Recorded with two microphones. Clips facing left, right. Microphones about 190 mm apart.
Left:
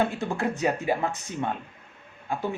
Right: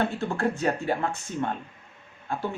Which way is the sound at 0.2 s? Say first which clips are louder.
Even; 15° left (ahead or behind).